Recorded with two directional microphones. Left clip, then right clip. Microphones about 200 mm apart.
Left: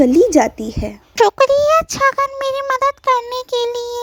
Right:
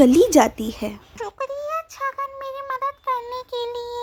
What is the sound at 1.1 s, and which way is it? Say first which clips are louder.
Speech: left 19 dB; 40° left (ahead or behind).